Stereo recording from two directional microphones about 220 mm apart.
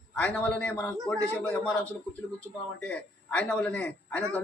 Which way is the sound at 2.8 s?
5° left (ahead or behind).